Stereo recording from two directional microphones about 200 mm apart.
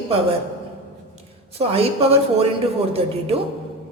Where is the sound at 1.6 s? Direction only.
30° right (ahead or behind).